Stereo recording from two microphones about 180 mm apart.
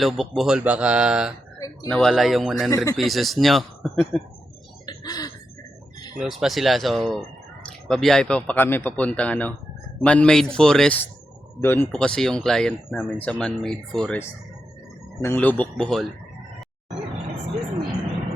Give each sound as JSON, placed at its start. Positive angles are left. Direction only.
{"t": 0.0, "sound": "speech", "side_deg": 0}
{"t": 1.5, "sound": "a sound", "side_deg": 20}
{"t": 1.9, "sound": "speech", "side_deg": 5}
{"t": 2.6, "sound": "speech", "side_deg": 20}
{"t": 3.0, "sound": "speech", "side_deg": 0}
{"t": 4.9, "sound": "a sound", "side_deg": 20}
{"t": 6.1, "sound": "speech", "side_deg": 0}
{"t": 15.2, "sound": "speech", "side_deg": 10}